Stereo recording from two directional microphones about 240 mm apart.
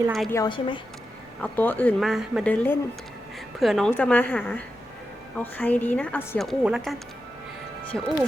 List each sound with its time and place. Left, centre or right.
0.1 s a woman's voice: centre
0.3 s a woman's voice: centre
1.4 s a woman's voice: centre
7.9 s a woman's voice: centre